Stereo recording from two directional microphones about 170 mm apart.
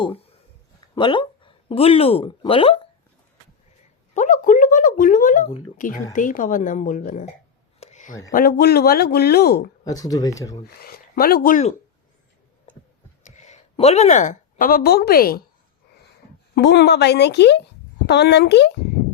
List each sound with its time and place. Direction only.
0.9 s speech: 30° left (ahead or behind)
4.1 s a woman's voice: 45° left (ahead or behind)
7.8 s a sound: 40° left (ahead or behind)
8.3 s speech: 60° left (ahead or behind)
9.8 s speech: 20° left (ahead or behind)
10.8 s speech: 60° left (ahead or behind)
13.2 s a woman's voice: 45° left (ahead or behind); by 15.4 s 60° left (ahead or behind)
16.6 s a woman's voice: 85° left